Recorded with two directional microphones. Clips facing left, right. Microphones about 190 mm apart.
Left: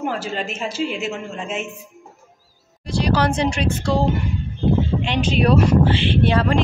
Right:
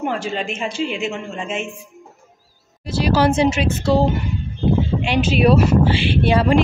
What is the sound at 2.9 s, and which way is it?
Speech, 5° right (ahead or behind).